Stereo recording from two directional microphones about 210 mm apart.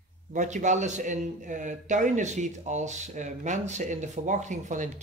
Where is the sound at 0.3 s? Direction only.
35° right (ahead or behind).